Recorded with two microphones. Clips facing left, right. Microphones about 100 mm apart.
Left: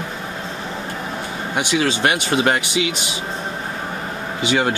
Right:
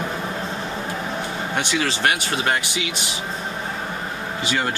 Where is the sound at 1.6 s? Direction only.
15° left (ahead or behind).